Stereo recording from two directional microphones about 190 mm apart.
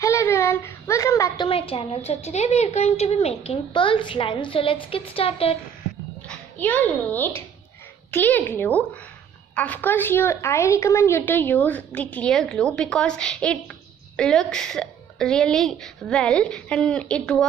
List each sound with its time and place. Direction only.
0.0 s a sound: 15° left (ahead or behind)
1.5 s a woman's voice: 30° left (ahead or behind)
6.2 s a child's voice: 10° left (ahead or behind)